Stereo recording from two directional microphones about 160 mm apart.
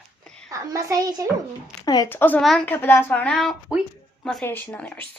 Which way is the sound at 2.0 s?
10° left (ahead or behind).